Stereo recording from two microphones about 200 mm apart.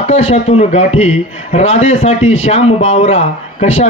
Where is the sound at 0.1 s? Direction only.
30° left (ahead or behind).